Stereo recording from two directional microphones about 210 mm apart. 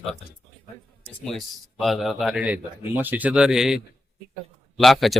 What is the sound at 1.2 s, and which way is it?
Speech, centre (ahead or behind).